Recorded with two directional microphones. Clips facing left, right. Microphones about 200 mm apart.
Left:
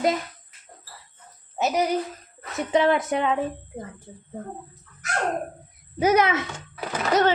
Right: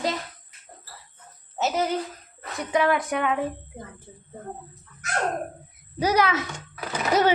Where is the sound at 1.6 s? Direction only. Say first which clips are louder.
Left 2 dB; 15° left (ahead or behind).